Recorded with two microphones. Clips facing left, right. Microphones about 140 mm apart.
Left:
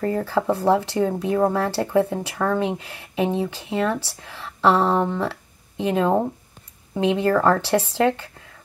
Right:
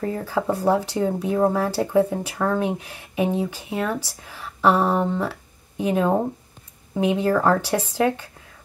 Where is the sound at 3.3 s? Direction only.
20° left (ahead or behind).